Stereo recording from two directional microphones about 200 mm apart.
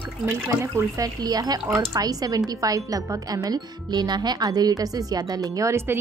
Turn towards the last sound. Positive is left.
turn(degrees=-10)  # may be behind; listen again after turning